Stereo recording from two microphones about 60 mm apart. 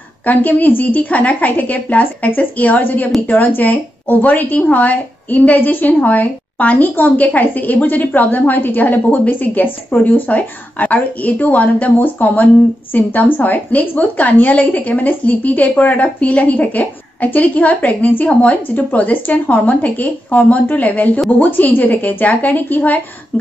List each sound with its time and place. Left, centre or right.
0.2 s a woman's voice: left